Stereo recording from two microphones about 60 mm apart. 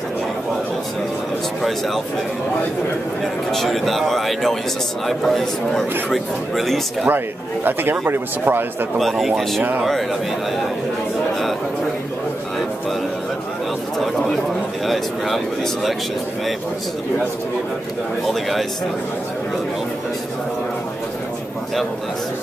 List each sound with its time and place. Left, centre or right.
3.5 s speech: centre
8.0 s speech: right
8.9 s speech: centre
14.9 s speech: centre
18.3 s speech: centre